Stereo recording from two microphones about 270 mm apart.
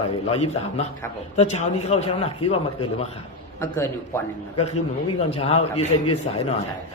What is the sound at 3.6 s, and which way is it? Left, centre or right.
Speech, centre.